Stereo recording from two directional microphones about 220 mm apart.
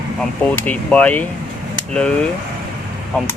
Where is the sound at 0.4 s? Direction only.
5° left (ahead or behind).